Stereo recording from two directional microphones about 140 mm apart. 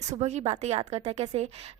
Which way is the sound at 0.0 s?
50° right (ahead or behind).